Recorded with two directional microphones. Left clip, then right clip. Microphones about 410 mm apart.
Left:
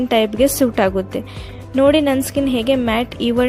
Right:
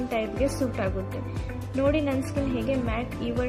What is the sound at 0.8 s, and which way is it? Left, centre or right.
Speech, left.